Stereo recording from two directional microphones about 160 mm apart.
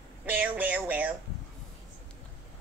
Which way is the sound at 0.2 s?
10° right (ahead or behind).